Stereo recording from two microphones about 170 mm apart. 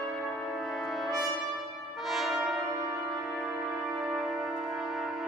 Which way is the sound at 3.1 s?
Centre (ahead or behind).